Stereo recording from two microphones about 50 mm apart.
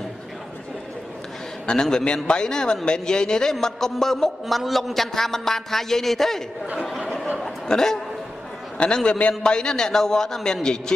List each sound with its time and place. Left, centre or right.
1.7 s a man's voice: centre
7.3 s chuckle: centre
8.7 s a man's voice: centre